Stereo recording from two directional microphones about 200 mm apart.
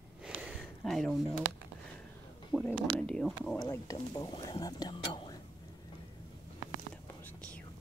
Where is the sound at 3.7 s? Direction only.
15° left (ahead or behind).